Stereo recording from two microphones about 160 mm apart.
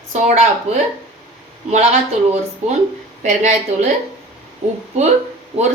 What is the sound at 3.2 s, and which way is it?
Speech, 45° right (ahead or behind).